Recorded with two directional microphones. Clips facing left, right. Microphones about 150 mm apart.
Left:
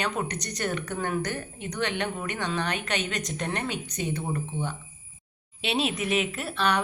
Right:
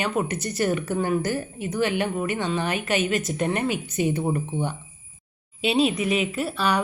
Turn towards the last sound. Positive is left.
turn(degrees=0)  # may be behind; listen again after turning